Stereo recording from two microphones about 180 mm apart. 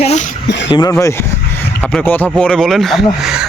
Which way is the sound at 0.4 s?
80° left.